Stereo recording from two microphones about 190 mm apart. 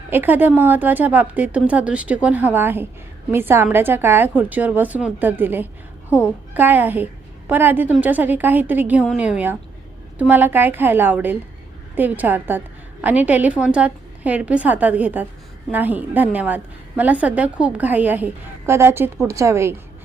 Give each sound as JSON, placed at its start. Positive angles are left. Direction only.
{"t": 0.1, "sound": "a woman's voice", "side_deg": -10}